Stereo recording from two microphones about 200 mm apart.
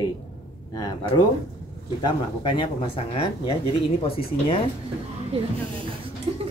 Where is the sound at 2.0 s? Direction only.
25° left (ahead or behind).